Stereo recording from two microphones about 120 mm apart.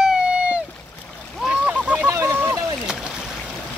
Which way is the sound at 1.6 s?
15° right (ahead or behind).